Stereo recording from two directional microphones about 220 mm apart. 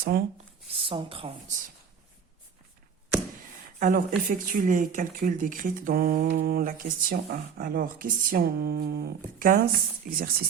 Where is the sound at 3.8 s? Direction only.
35° right (ahead or behind).